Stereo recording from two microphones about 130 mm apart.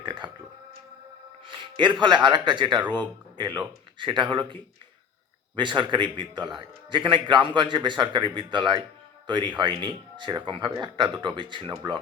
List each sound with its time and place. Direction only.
0.0 s a sound: 35° right (ahead or behind)
1.5 s speech: 40° right (ahead or behind)
5.5 s speech: 35° right (ahead or behind)